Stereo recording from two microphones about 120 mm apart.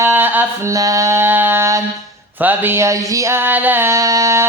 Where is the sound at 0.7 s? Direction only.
30° right (ahead or behind).